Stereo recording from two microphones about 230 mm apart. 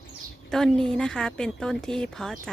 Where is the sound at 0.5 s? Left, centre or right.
Centre.